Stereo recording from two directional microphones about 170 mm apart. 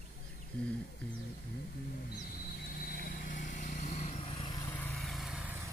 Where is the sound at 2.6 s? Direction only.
60° left (ahead or behind); by 4.7 s 30° left (ahead or behind).